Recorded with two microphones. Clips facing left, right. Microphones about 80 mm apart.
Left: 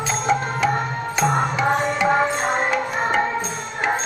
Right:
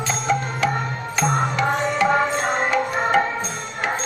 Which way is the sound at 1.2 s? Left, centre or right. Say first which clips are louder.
Left 1 dB; centre.